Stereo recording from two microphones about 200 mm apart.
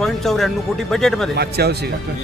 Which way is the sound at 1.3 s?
55° right (ahead or behind).